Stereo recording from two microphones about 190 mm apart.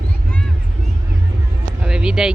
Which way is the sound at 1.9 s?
5° right (ahead or behind).